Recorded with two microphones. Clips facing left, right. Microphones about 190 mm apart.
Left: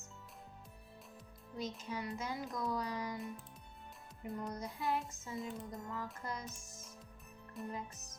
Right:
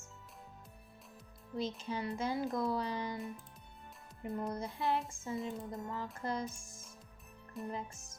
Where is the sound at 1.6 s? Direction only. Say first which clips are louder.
Right 4 dB; 30° right (ahead or behind).